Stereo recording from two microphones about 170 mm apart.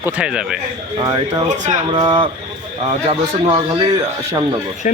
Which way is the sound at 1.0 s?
20° right (ahead or behind).